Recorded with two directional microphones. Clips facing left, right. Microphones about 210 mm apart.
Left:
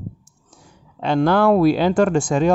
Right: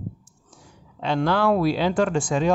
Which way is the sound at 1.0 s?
50° left (ahead or behind).